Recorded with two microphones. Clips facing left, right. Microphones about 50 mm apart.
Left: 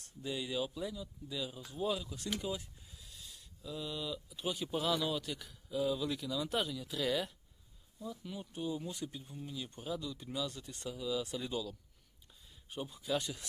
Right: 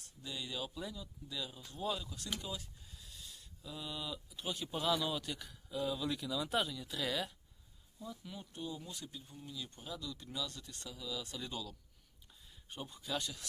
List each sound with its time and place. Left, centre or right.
0.2 s speech: centre
2.4 s speech: left
2.9 s speech: centre
8.5 s speech: centre